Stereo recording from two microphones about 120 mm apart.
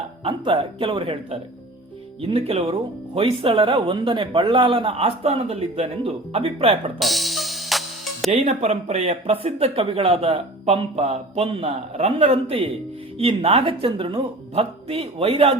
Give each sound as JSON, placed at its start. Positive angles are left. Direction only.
{"t": 0.3, "sound": "speech", "side_deg": -45}
{"t": 7.0, "sound": "music", "side_deg": 0}
{"t": 8.3, "sound": "speech", "side_deg": -70}